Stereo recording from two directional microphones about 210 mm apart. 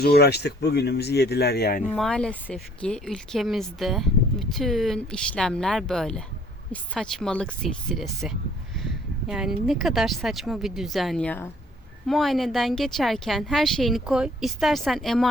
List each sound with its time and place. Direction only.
0.0 s speech: 50° left (ahead or behind)
2.0 s a woman's voice: 5° left (ahead or behind)